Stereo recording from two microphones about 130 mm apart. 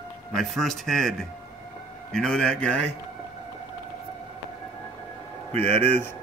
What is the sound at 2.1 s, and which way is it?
Speech, 5° left (ahead or behind).